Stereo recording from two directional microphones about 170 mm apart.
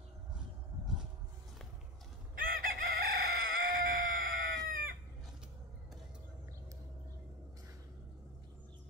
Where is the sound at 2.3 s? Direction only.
55° right (ahead or behind).